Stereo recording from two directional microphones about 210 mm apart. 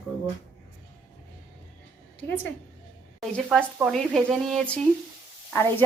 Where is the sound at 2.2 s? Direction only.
10° left (ahead or behind).